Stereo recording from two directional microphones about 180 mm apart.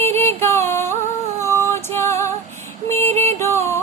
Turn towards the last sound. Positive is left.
turn(degrees=15)  # may be behind; listen again after turning